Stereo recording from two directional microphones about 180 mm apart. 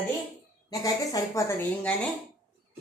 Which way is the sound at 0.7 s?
20° left (ahead or behind).